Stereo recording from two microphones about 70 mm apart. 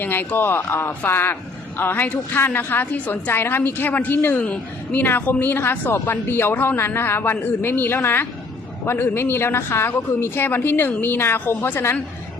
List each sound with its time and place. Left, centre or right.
0.0 s speech: left
4.4 s a woman's voice: centre